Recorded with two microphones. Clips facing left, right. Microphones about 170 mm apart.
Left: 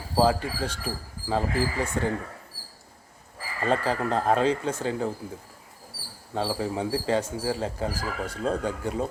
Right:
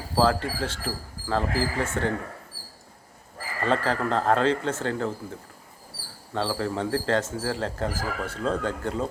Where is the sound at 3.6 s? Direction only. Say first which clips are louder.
Even; 10° left (ahead or behind).